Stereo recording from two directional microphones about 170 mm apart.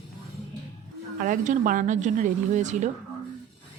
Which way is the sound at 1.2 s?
50° right (ahead or behind).